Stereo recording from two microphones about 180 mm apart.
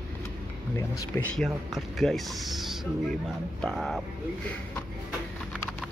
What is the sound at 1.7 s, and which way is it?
Speech, centre (ahead or behind).